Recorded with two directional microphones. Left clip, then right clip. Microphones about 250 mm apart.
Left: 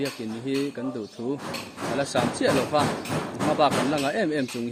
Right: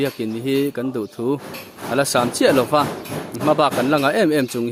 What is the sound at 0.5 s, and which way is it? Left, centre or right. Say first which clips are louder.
Speech: right 7 dB; right.